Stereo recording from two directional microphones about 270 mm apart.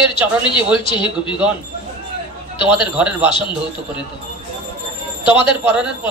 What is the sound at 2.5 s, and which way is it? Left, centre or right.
Speech, centre.